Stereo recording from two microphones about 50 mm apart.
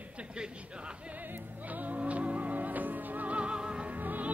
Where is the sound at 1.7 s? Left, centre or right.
Right.